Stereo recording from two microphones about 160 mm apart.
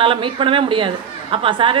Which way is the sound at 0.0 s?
35° right (ahead or behind).